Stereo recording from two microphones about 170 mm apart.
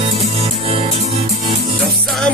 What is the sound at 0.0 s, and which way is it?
Music, 35° right (ahead or behind).